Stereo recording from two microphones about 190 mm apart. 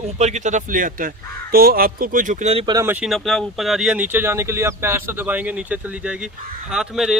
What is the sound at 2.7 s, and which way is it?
Speech, 10° right (ahead or behind).